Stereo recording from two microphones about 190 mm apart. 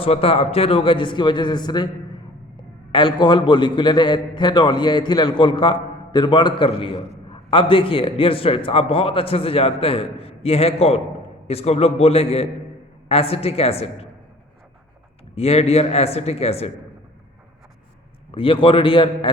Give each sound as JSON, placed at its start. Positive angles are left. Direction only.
{"t": 0.0, "sound": "a man's voice", "side_deg": 30}
{"t": 15.4, "sound": "a man's voice", "side_deg": 30}
{"t": 18.3, "sound": "a man's voice", "side_deg": 30}